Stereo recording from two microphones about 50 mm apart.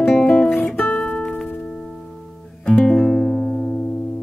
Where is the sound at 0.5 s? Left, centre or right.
Left.